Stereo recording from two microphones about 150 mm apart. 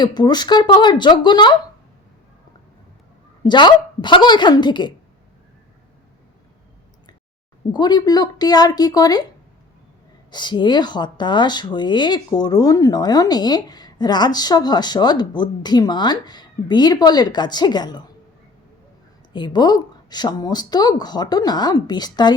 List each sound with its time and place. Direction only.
0.0 s speech: 30° left (ahead or behind)
3.4 s a woman's voice: 30° left (ahead or behind)
7.7 s speech: 30° left (ahead or behind)
10.3 s speech: 30° left (ahead or behind)
19.3 s speech: 30° left (ahead or behind)